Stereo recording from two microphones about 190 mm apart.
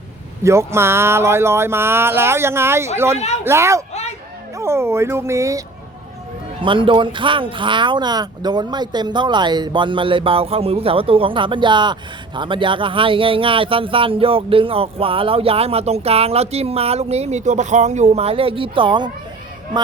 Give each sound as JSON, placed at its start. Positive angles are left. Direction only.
{"t": 0.4, "sound": "speech", "side_deg": -15}
{"t": 3.2, "sound": "speech", "side_deg": 35}
{"t": 3.4, "sound": "speech", "side_deg": -15}
{"t": 6.6, "sound": "speech", "side_deg": -25}